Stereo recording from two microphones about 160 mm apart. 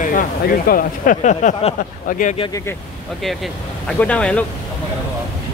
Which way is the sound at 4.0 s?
5° left (ahead or behind).